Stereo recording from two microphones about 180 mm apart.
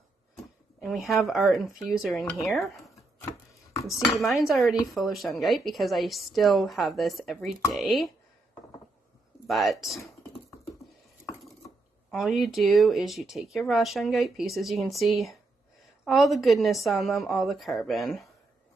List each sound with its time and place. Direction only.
0.7 s speech: centre (ahead or behind)
3.7 s cutlery: 15° left (ahead or behind)
4.5 s speech: centre (ahead or behind)
9.5 s speech: centre (ahead or behind)
12.1 s speech: centre (ahead or behind)